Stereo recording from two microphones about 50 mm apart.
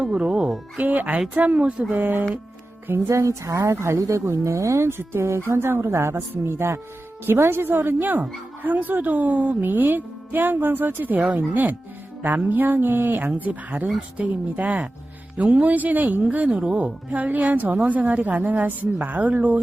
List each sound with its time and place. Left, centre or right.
0.0 s music: centre
0.8 s a woman's voice: right
3.1 s a woman's voice: right
4.9 s speech: right
7.3 s a woman's voice: right